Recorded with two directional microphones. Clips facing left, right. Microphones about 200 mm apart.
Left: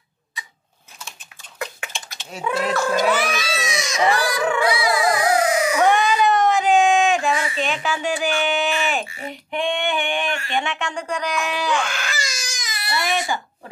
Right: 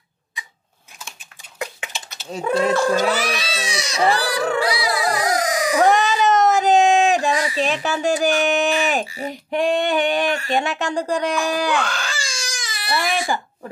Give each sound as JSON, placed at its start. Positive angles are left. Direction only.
{"t": 1.9, "sound": "typing", "side_deg": 0}
{"t": 2.3, "sound": "speech", "side_deg": -35}
{"t": 11.8, "sound": "baby cry", "side_deg": -30}